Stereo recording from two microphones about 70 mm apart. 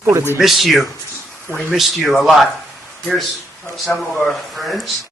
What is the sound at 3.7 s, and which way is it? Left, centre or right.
Speech, centre.